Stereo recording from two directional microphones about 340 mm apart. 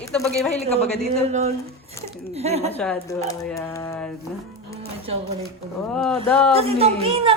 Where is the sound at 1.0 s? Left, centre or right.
Centre.